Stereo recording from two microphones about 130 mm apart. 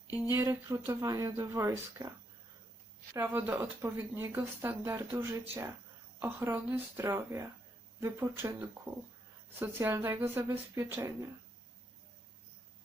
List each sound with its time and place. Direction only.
0.3 s speech: 20° right (ahead or behind)
3.2 s speech: 15° right (ahead or behind)